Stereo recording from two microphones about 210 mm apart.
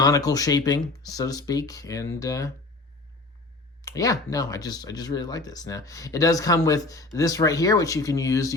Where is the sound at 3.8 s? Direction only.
15° left (ahead or behind).